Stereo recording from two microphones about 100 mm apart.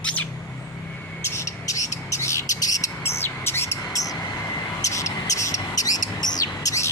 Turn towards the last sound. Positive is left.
turn(degrees=35)  # may be behind; listen again after turning